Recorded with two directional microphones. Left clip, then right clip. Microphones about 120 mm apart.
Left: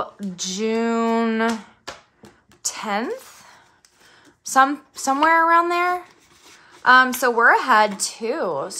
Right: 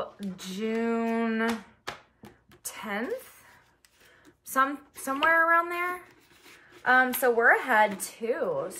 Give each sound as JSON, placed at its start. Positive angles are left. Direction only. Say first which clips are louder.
{"t": 0.0, "sound": "speech", "louder": "left 9 dB", "side_deg": 40}
{"t": 2.6, "sound": "speech", "louder": "left 9 dB", "side_deg": 40}